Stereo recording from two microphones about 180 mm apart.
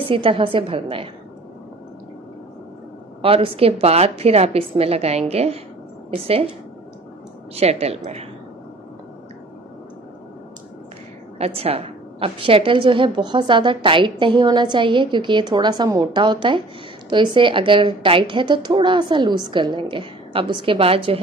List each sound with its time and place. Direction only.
0.1 s a woman's voice: 30° right (ahead or behind)
3.2 s a woman's voice: 30° right (ahead or behind)
7.5 s a woman's voice: 35° right (ahead or behind)
11.3 s a woman's voice: 35° right (ahead or behind)